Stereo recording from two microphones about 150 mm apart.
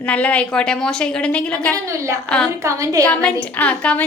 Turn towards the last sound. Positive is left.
turn(degrees=10)  # may be behind; listen again after turning